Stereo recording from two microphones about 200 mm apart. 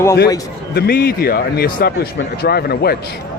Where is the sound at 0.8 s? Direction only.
50° left (ahead or behind).